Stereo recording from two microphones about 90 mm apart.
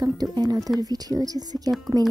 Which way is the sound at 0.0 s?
45° right (ahead or behind).